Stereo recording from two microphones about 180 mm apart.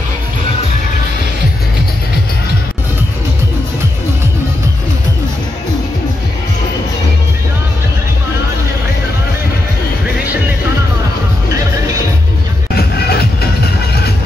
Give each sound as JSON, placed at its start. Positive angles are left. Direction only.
{"t": 12.7, "sound": "music", "side_deg": 60}